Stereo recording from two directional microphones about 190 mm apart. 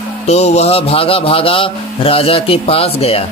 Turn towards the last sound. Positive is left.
turn(degrees=30)  # may be behind; listen again after turning